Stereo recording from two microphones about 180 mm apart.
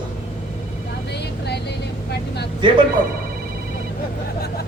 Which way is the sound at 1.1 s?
65° left (ahead or behind).